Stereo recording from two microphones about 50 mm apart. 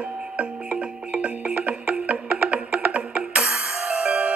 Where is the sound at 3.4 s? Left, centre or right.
Centre.